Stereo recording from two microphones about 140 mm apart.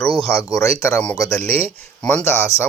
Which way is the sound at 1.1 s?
25° left (ahead or behind).